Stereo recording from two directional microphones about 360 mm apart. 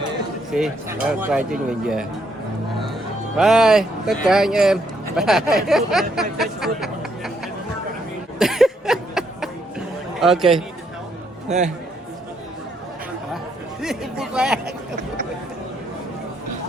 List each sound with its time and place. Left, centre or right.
0.5 s speech: centre
3.3 s speech: centre
8.4 s a sound: centre
10.2 s speech: centre
11.4 s a man's voice: centre
13.8 s a sound: centre